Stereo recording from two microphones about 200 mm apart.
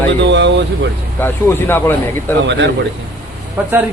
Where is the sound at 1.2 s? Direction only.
10° left (ahead or behind).